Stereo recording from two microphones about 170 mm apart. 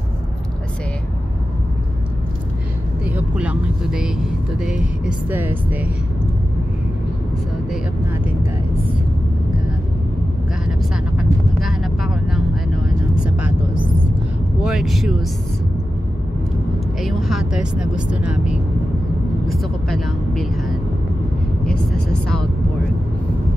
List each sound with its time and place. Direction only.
3.1 s speech: 10° right (ahead or behind)
11.1 s vehicle: centre (ahead or behind)
14.6 s speech: centre (ahead or behind)
17.0 s speech: centre (ahead or behind)